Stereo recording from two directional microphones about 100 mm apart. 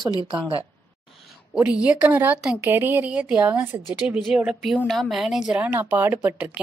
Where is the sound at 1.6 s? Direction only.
15° right (ahead or behind).